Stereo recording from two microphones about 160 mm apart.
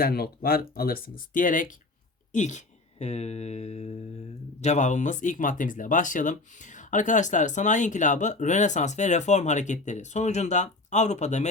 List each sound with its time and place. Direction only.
0.0 s speech: 75° left (ahead or behind); by 11.4 s 45° left (ahead or behind)